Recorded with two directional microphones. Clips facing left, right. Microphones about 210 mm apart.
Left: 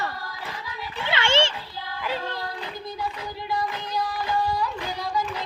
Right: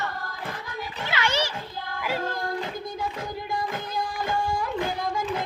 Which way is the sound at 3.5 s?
50° right (ahead or behind).